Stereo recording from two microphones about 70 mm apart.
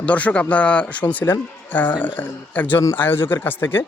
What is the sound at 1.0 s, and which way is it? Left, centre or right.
Speech, left.